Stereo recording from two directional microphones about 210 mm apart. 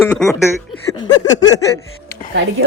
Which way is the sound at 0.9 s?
20° left (ahead or behind).